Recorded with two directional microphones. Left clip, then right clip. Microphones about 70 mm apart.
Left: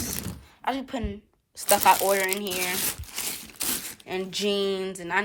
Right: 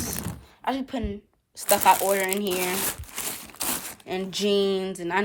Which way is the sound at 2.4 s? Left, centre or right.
Right.